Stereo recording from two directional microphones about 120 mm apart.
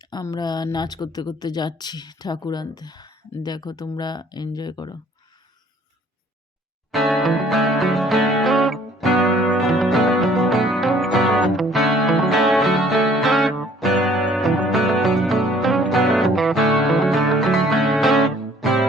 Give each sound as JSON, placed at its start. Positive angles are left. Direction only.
{"t": 0.0, "sound": "a woman's voice", "side_deg": 35}
{"t": 6.9, "sound": "music", "side_deg": 0}